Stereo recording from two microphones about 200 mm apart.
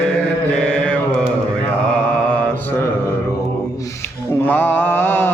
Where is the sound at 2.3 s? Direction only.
5° left (ahead or behind).